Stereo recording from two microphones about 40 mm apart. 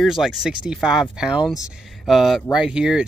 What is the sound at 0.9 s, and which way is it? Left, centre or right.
Speech, centre.